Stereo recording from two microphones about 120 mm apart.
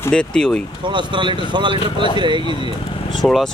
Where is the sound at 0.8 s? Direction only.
40° right (ahead or behind).